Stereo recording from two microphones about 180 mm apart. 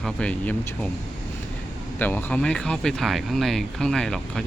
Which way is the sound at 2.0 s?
10° left (ahead or behind).